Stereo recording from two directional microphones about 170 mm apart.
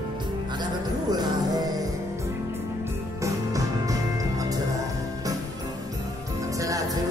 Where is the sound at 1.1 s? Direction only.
25° right (ahead or behind).